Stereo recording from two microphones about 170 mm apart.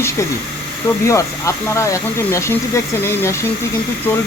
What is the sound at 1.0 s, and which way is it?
Speech, 15° left (ahead or behind).